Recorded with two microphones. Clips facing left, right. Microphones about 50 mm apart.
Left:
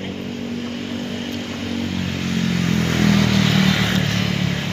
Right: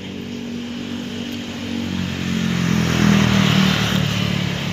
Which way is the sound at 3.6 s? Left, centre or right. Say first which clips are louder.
Even; centre.